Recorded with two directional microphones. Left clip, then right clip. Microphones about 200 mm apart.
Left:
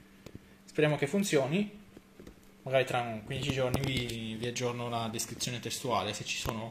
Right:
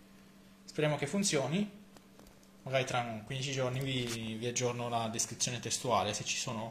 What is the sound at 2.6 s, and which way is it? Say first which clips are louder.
Speech: left 4 dB; 15° left (ahead or behind).